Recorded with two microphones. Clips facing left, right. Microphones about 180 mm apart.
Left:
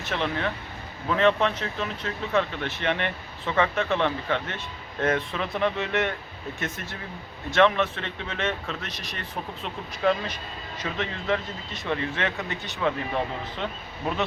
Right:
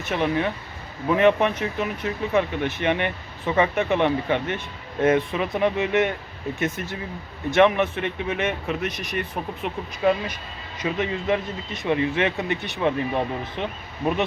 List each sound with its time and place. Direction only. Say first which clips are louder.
0.1 s speech: right 5 dB; 15° right (ahead or behind)
7.5 s speech: right 3 dB; 15° right (ahead or behind)